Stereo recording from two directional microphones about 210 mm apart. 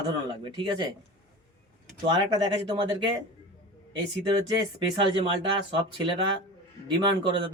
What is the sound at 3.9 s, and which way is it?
A woman's voice, 20° right (ahead or behind).